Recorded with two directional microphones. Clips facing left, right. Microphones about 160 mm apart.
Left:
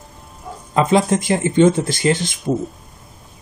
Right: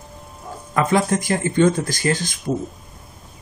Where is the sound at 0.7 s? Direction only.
20° left (ahead or behind).